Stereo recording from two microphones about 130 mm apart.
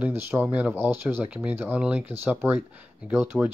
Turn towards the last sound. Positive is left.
turn(degrees=-10)  # may be behind; listen again after turning